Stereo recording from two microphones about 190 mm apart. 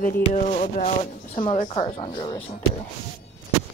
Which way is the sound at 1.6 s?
30° left (ahead or behind).